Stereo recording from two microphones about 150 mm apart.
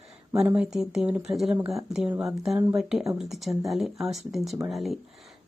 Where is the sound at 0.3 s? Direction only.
10° right (ahead or behind).